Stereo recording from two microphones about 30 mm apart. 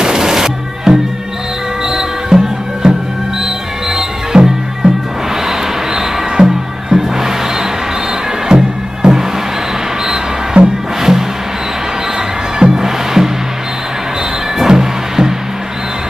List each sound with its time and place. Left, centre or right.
0.0 s music: right
4.3 s music: right
5.5 s music: centre
10.6 s music: right
11.0 s music: centre
12.5 s music: centre
14.7 s music: centre